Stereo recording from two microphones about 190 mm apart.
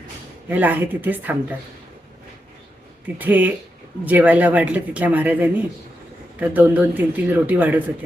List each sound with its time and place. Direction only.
0.4 s speech: 10° right (ahead or behind)
3.2 s speech: 10° right (ahead or behind)